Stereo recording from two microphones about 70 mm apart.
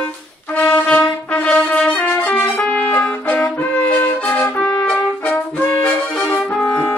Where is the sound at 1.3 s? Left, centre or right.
Centre.